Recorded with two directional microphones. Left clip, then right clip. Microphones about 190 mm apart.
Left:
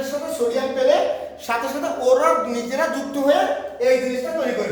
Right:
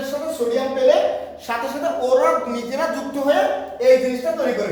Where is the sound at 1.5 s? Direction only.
25° left (ahead or behind).